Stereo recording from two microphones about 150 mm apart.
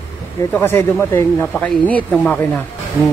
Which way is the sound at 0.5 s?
15° left (ahead or behind).